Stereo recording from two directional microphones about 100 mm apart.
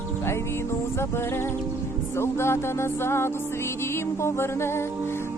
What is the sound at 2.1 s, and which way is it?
Music, 25° left (ahead or behind).